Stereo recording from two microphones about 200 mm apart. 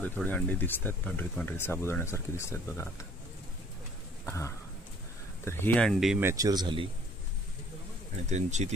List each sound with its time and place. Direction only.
0.0 s speech: 10° left (ahead or behind)
4.3 s speech: 15° left (ahead or behind); by 6.9 s 25° right (ahead or behind)
8.3 s speech: 35° right (ahead or behind)